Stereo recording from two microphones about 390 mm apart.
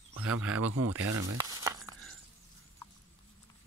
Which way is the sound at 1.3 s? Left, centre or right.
Centre.